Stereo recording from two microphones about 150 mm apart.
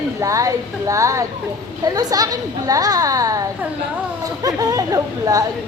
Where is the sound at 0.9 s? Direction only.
20° right (ahead or behind).